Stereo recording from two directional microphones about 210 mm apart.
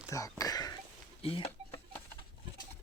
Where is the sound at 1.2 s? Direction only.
25° left (ahead or behind).